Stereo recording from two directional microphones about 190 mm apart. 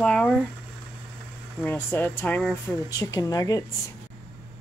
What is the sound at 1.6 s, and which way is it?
Speech, 10° left (ahead or behind).